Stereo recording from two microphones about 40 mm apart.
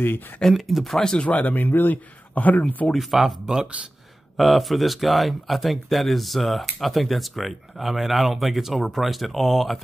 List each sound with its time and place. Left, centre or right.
0.4 s speech: centre
0.9 s speech: centre
1.2 s speech: left
1.5 s speech: left
2.9 s speech: centre
4.4 s speech: centre